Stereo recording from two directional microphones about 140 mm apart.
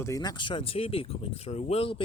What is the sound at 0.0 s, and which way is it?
Speech, 25° left (ahead or behind).